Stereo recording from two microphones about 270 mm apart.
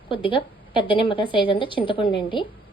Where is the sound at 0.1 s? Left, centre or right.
Centre.